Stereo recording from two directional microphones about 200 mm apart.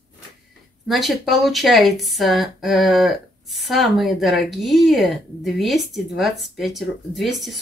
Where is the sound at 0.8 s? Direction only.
Centre (ahead or behind).